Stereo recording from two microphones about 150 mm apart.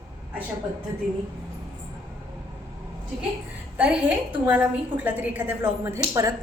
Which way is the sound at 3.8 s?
10° right (ahead or behind).